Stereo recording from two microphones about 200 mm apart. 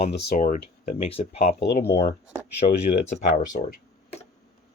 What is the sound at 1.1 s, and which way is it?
Speech, 30° left (ahead or behind).